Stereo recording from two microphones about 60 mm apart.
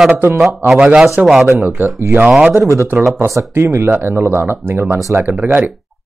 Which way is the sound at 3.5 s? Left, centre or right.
Right.